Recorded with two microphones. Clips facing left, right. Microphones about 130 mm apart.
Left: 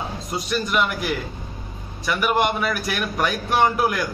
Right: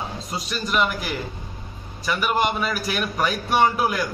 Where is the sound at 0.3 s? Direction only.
Centre (ahead or behind).